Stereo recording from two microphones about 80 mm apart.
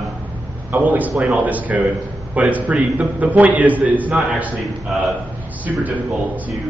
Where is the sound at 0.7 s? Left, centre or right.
Centre.